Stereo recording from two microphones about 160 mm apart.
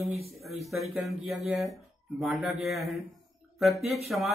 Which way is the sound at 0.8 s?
Centre (ahead or behind).